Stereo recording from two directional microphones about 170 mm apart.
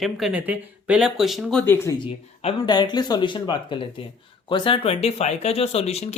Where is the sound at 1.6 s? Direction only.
15° left (ahead or behind).